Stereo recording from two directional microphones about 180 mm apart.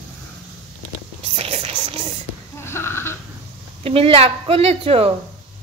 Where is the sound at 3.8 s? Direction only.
30° right (ahead or behind).